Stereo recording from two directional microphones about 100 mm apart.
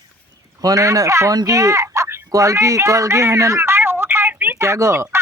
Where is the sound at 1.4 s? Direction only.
35° right (ahead or behind).